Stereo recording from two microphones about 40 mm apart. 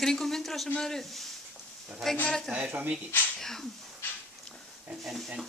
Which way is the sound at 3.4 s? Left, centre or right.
Centre.